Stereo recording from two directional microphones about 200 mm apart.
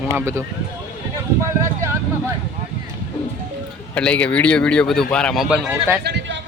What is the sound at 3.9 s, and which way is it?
Speech, 5° left (ahead or behind).